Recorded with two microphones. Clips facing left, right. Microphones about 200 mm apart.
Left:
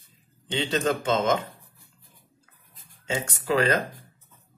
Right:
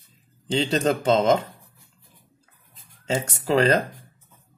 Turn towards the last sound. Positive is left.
turn(degrees=-30)  # may be behind; listen again after turning